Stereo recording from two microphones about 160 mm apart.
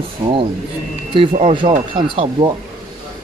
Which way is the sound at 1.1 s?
35° right (ahead or behind).